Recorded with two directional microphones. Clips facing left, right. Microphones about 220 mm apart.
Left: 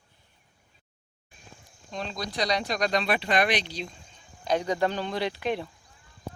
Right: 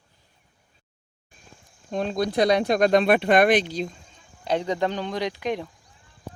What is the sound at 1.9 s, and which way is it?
Speech, 50° right (ahead or behind).